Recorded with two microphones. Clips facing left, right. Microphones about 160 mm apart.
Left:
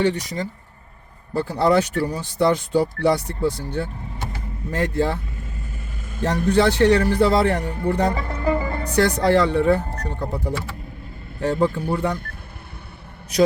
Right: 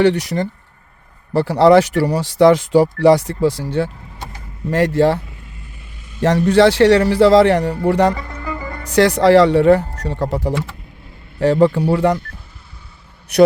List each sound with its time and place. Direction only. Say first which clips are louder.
0.0 s speech: right 7 dB; 75° right (ahead or behind)
6.2 s speech: right 6 dB; 90° right
8.4 s music: left 6 dB; 35° left (ahead or behind)
8.9 s speech: right 7 dB; 90° right
13.3 s a man's voice: right 7 dB; 65° right (ahead or behind)